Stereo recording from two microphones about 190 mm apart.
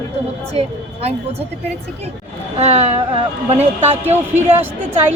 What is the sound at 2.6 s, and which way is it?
Speech, 35° right (ahead or behind).